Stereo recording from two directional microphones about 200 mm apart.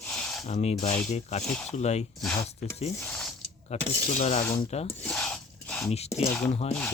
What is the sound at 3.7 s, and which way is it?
Speech, 30° left (ahead or behind).